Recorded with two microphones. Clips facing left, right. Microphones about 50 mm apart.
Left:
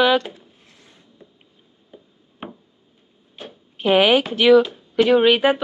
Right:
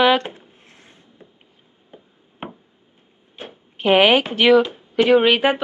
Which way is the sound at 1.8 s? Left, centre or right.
Right.